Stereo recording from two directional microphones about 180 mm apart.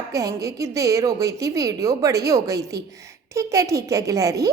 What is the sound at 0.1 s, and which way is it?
A woman's voice, 20° right (ahead or behind).